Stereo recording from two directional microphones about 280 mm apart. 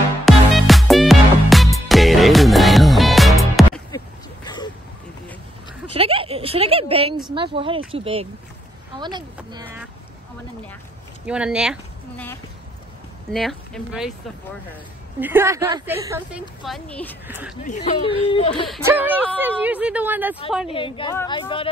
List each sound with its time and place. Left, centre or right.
0.2 s music: centre
5.9 s a sound: centre
7.9 s a woman's voice: centre
11.2 s speech: centre
13.3 s speech: centre
15.1 s a woman's voice: centre
17.3 s speech: centre
17.6 s speech: left
18.7 s a woman's voice: centre
20.6 s speech: centre